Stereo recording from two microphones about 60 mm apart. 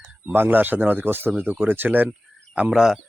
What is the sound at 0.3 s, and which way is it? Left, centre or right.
Speech, right.